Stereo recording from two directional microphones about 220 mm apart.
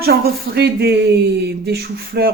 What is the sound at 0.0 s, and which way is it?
Speech, 45° right (ahead or behind).